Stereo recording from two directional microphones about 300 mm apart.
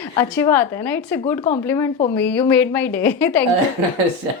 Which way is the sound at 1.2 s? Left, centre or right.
Left.